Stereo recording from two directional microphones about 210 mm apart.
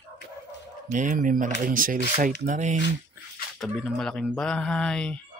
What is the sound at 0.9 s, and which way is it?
Speech, 40° right (ahead or behind).